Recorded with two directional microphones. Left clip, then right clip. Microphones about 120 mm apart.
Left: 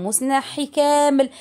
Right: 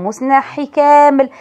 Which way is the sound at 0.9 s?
5° left (ahead or behind).